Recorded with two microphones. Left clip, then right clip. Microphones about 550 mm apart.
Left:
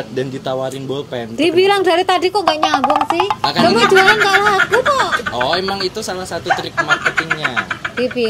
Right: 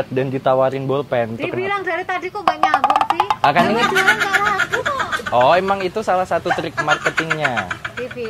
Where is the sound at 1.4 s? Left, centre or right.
Left.